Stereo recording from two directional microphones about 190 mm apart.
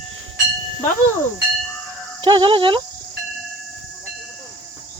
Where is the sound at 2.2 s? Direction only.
25° right (ahead or behind).